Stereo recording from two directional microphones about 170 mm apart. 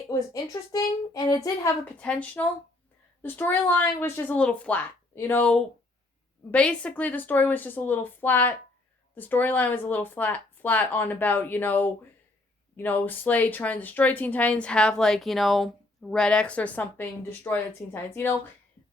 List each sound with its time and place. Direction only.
0.1 s a woman's voice: 20° left (ahead or behind)
2.0 s speech: 10° left (ahead or behind)